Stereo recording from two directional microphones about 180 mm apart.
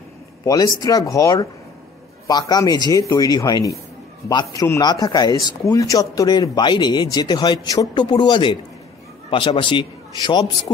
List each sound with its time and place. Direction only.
0.5 s speech: 20° left (ahead or behind)